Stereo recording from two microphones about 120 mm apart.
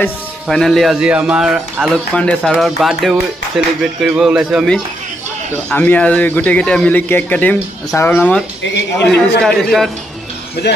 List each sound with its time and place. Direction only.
0.5 s a man's voice: centre (ahead or behind)
2.1 s speech: 10° left (ahead or behind)
5.7 s a man's voice: 10° left (ahead or behind)
9.1 s speech: 5° left (ahead or behind)